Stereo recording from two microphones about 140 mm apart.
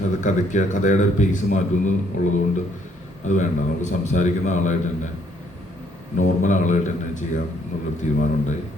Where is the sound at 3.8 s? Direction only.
60° left (ahead or behind).